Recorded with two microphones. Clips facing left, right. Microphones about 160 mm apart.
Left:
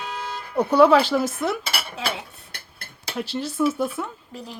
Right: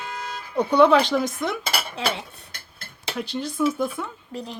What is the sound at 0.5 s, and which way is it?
Speech, 5° left (ahead or behind).